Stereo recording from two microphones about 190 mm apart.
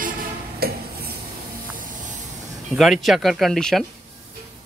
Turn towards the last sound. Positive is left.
turn(degrees=0)  # may be behind; listen again after turning